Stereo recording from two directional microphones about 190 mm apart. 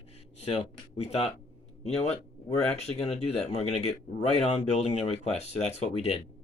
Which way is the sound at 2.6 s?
35° left (ahead or behind).